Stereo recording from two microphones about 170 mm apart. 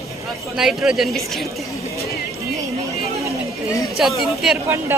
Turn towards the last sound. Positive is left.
turn(degrees=-5)  # may be behind; listen again after turning